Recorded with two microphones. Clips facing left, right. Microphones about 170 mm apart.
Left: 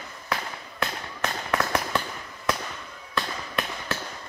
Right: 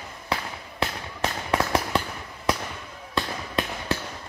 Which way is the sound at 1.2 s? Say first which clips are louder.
Right 2 dB; 25° right (ahead or behind).